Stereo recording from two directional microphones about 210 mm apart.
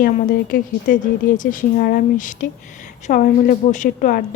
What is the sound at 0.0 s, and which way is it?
A woman's voice, 40° left (ahead or behind).